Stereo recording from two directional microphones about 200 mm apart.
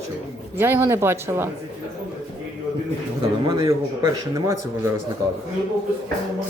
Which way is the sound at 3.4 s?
20° right (ahead or behind).